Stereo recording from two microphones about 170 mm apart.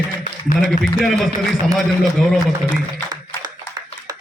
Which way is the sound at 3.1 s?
20° right (ahead or behind).